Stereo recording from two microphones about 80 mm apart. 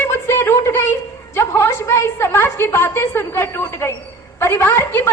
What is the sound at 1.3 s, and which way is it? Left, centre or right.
A woman's voice, left.